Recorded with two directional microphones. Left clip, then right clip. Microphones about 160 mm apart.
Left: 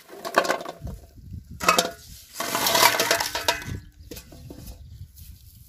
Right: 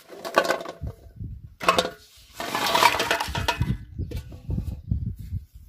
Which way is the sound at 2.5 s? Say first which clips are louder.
Even; 25° right (ahead or behind).